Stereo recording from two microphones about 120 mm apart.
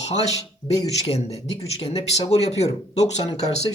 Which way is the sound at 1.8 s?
60° left (ahead or behind).